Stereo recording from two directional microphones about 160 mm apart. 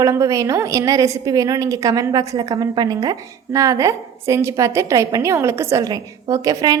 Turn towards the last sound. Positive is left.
turn(degrees=-20)  # may be behind; listen again after turning